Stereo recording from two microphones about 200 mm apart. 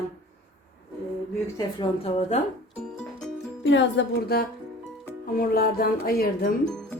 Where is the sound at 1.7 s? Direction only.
30° left (ahead or behind).